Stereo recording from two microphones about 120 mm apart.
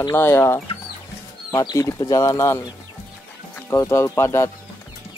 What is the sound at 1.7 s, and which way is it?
Speech, 30° left (ahead or behind).